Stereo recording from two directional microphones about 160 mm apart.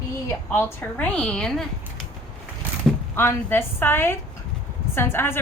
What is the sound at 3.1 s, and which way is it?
A woman's voice, 15° left (ahead or behind).